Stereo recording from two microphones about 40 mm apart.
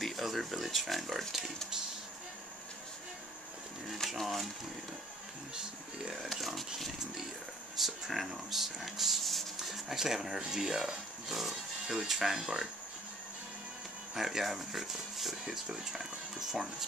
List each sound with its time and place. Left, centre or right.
0.0 s speech: centre
4.2 s speech: centre
5.5 s speech: centre
6.1 s speech: centre
7.7 s speech: centre
14.1 s speech: centre